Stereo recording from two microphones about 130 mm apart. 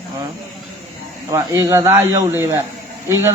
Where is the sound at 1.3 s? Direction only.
20° right (ahead or behind).